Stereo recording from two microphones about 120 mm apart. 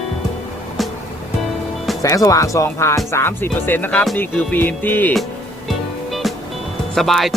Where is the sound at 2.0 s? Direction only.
30° left (ahead or behind).